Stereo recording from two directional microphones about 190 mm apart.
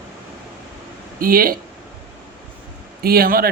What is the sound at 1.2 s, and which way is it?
Speech, 50° right (ahead or behind).